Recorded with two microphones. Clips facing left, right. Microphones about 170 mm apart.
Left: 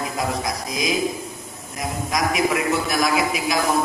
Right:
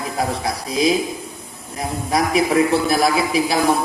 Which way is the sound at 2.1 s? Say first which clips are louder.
Right 5 dB; 30° right (ahead or behind).